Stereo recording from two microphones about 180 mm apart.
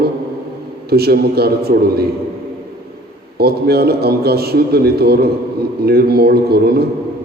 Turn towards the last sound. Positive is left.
turn(degrees=-60)  # may be behind; listen again after turning